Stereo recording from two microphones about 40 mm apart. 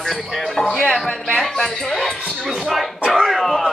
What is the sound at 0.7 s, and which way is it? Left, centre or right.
Speech, left.